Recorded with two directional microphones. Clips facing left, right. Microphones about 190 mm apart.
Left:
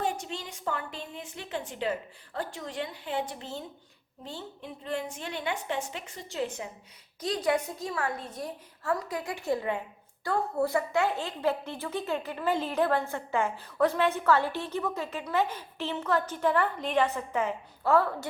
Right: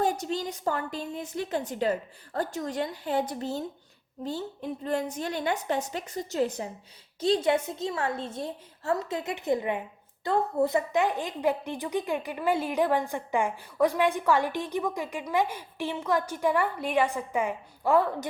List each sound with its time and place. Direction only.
0.0 s a woman's voice: 40° right (ahead or behind)
7.2 s a woman's voice: 25° right (ahead or behind)